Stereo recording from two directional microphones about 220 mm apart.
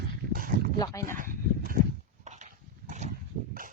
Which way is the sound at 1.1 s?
40° right (ahead or behind).